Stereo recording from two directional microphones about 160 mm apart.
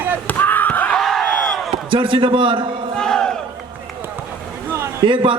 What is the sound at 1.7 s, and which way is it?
Speech, 30° right (ahead or behind).